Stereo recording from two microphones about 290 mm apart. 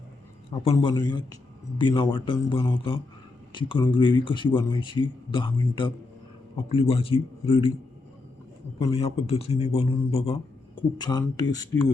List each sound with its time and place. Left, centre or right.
0.6 s a man's voice: centre
8.8 s a man's voice: centre